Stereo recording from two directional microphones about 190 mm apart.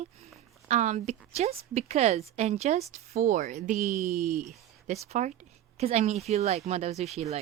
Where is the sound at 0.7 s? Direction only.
40° right (ahead or behind).